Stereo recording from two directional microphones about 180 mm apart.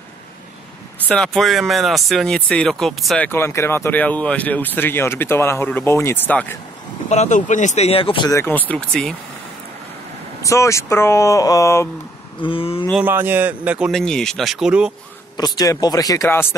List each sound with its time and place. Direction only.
1.0 s speech: 5° left (ahead or behind)
3.3 s speech: 15° left (ahead or behind)
7.1 s speech: 40° left (ahead or behind)
8.3 s speech: 15° left (ahead or behind)
10.4 s speech: 15° left (ahead or behind)
12.4 s speech: 30° left (ahead or behind)
13.0 s speech: 10° right (ahead or behind)
15.3 s speech: 20° left (ahead or behind)